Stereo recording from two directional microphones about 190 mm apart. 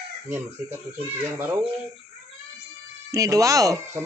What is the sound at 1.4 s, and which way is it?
Speech, 10° right (ahead or behind).